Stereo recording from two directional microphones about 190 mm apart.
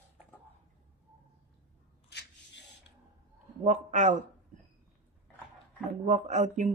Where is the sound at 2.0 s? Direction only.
65° left (ahead or behind).